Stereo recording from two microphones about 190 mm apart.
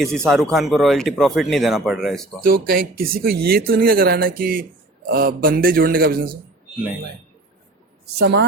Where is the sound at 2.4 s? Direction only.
50° right (ahead or behind).